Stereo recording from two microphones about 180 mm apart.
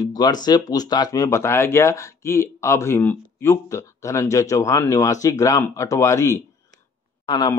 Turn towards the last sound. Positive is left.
turn(degrees=25)  # may be behind; listen again after turning